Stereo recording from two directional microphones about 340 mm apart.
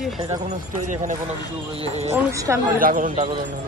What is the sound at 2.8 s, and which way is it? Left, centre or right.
Speech, right.